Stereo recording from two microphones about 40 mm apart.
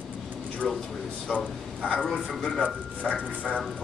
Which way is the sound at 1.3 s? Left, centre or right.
Centre.